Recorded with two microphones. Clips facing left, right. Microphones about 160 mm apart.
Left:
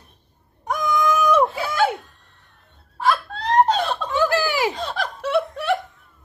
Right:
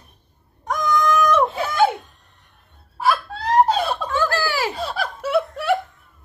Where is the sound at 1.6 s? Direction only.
20° right (ahead or behind).